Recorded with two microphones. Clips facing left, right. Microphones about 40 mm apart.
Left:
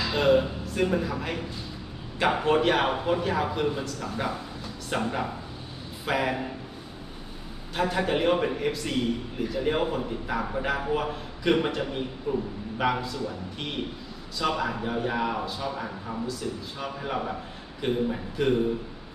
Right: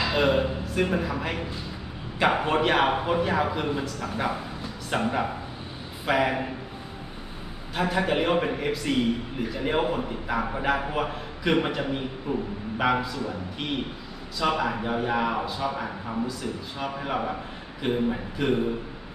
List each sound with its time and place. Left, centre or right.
0.0 s a man's voice: centre
7.8 s a man's voice: centre
12.3 s speech: right
12.8 s a man's voice: centre
14.6 s a man's voice: centre